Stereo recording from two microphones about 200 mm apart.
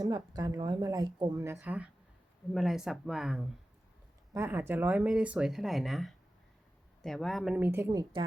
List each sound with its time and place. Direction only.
0.0 s a woman's voice: 20° right (ahead or behind); by 3.4 s centre (ahead or behind)
4.4 s speech: 15° right (ahead or behind)